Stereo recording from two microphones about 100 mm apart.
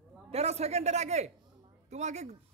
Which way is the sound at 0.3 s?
90° right.